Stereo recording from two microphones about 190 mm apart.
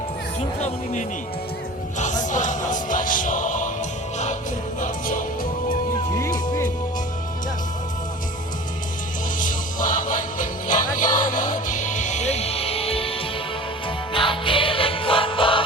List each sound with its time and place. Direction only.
2.0 s music: 40° left (ahead or behind)
4.8 s music: 45° left (ahead or behind)
6.1 s music: 15° left (ahead or behind)
9.4 s music: 45° left (ahead or behind); by 15.6 s 25° left (ahead or behind)